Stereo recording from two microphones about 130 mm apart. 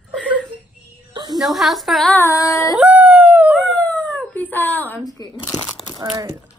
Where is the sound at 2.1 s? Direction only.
25° left (ahead or behind).